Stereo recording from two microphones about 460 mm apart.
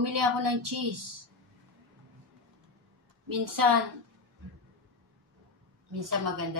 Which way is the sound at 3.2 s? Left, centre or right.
Right.